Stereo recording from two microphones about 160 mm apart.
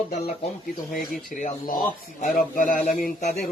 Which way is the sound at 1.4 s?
55° left (ahead or behind).